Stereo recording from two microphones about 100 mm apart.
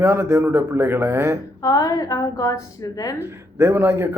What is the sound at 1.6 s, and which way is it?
A woman's voice, 35° left (ahead or behind).